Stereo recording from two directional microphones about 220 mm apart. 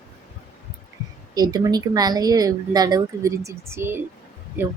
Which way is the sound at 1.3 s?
15° right (ahead or behind).